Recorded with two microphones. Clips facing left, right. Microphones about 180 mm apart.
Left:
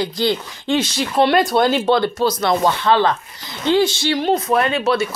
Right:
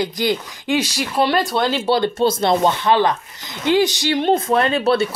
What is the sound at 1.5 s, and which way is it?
Speech, 50° left (ahead or behind).